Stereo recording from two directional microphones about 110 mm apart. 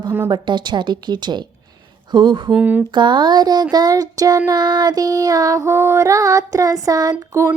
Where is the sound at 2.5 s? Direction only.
15° right (ahead or behind).